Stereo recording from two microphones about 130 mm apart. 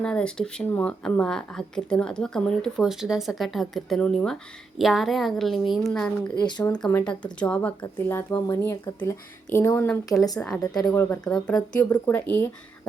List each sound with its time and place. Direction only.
0.0 s speech: 5° left (ahead or behind)
6.4 s speech: 30° left (ahead or behind)
6.8 s speech: 10° left (ahead or behind)